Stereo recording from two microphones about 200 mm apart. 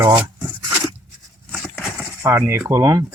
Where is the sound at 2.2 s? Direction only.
15° right (ahead or behind).